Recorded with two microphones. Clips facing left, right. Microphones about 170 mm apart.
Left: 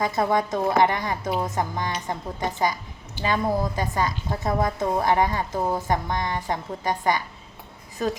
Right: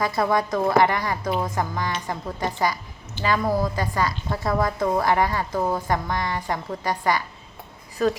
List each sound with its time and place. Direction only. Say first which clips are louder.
0.2 s a woman's voice: right 1 dB; 20° left (ahead or behind)